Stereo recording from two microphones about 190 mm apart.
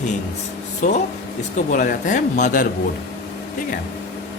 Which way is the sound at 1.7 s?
40° left (ahead or behind).